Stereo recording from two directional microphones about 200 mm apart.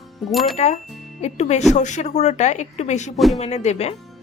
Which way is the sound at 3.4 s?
35° left (ahead or behind).